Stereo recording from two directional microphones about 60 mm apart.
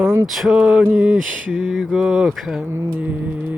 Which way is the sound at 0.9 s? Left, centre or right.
Right.